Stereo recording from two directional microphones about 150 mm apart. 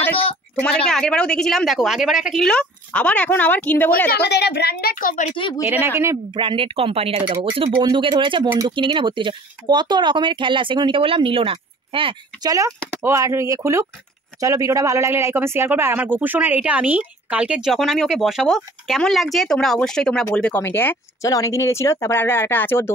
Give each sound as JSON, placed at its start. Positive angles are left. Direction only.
{"t": 0.6, "sound": "a woman's voice", "side_deg": 5}
{"t": 4.1, "sound": "a woman's voice", "side_deg": 90}
{"t": 5.3, "sound": "speech", "side_deg": 35}
{"t": 5.6, "sound": "speech", "side_deg": -10}
{"t": 6.3, "sound": "speech", "side_deg": -35}
{"t": 12.4, "sound": "speech", "side_deg": -20}